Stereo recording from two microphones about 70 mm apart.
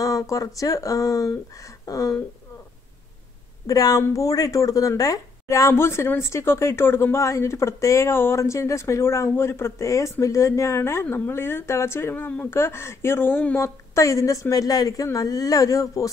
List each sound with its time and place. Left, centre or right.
0.0 s a sound: left
0.6 s speech: left
3.6 s a woman's voice: left
5.7 s a woman's voice: left
13.6 s speech: left